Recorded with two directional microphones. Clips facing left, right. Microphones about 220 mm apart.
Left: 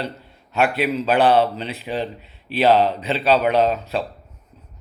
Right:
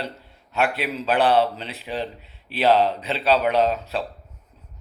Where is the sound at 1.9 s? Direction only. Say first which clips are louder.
Left 2 dB; 5° left (ahead or behind).